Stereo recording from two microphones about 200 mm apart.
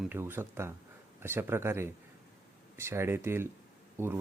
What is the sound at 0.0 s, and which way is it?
Speech, 10° right (ahead or behind).